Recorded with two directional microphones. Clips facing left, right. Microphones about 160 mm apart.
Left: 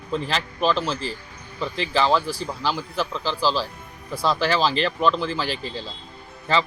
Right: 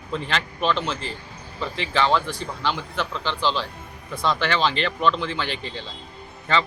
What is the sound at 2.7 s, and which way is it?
Speech, 35° left (ahead or behind).